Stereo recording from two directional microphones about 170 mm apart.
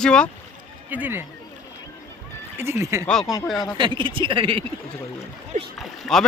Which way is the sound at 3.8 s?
30° right (ahead or behind).